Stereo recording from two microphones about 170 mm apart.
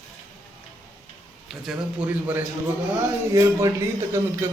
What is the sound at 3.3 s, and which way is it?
Speech, 20° right (ahead or behind).